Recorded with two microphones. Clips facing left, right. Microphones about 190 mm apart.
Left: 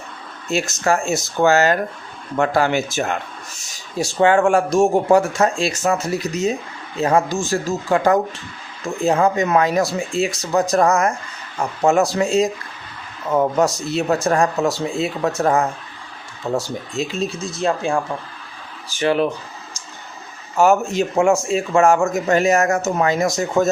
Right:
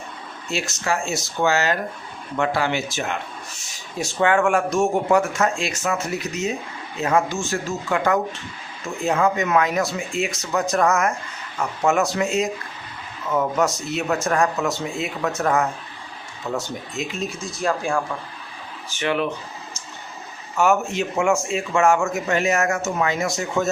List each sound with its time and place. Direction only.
0.5 s speech: 45° left (ahead or behind)
3.9 s a man's voice: 35° left (ahead or behind)
18.9 s a man's voice: 35° left (ahead or behind)
20.6 s a man's voice: 35° left (ahead or behind)